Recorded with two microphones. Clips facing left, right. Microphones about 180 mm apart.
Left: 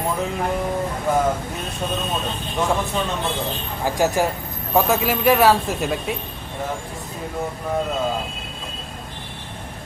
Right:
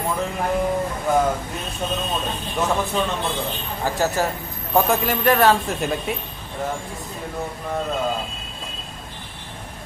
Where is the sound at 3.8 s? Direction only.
15° left (ahead or behind).